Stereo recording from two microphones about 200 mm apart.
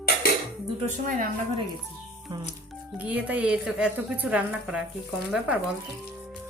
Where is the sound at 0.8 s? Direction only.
40° right (ahead or behind).